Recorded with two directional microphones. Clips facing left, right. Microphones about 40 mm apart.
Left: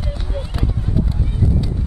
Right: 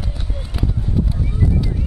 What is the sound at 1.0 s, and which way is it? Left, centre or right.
Clip-clop, centre.